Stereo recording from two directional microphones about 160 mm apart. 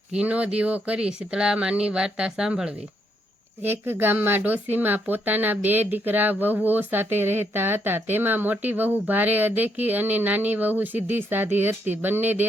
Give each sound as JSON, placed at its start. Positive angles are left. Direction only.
{"t": 0.1, "sound": "speech", "side_deg": -5}